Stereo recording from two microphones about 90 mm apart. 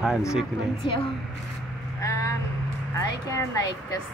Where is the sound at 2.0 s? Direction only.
30° left (ahead or behind).